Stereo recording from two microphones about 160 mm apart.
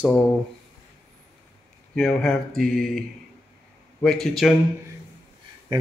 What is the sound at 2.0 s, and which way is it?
Speech, 5° left (ahead or behind).